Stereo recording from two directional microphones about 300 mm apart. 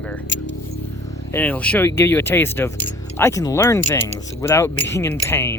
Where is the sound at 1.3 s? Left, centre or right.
Centre.